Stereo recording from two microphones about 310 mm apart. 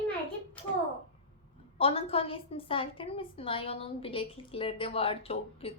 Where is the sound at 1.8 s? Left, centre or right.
Centre.